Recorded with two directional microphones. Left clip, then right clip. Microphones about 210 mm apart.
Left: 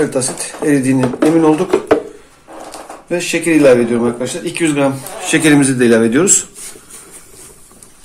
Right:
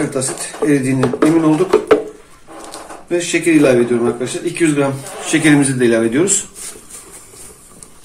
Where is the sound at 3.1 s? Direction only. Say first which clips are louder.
Even; 40° left (ahead or behind).